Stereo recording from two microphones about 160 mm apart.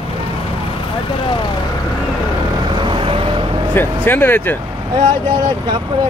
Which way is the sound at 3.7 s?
15° left (ahead or behind).